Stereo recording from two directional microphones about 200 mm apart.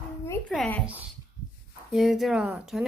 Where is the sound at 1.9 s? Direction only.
Centre (ahead or behind).